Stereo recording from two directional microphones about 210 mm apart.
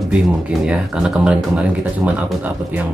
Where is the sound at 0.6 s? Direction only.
5° right (ahead or behind).